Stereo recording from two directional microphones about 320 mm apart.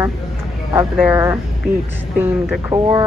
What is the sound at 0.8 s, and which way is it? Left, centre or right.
A woman's voice, centre.